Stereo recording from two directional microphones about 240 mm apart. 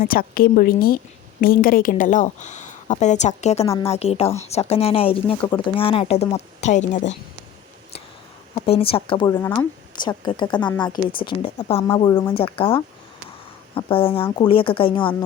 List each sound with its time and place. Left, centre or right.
0.0 s a woman's voice: left
8.5 s a woman's voice: left